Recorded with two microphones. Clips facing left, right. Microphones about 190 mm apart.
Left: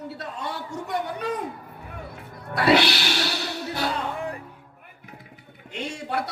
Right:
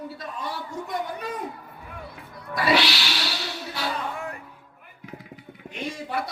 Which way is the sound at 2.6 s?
60° left (ahead or behind).